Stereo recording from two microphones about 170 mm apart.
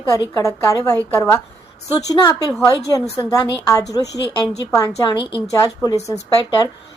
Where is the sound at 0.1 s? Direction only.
20° left (ahead or behind).